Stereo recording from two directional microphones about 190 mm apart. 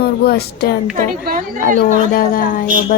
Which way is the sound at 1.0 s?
50° right (ahead or behind).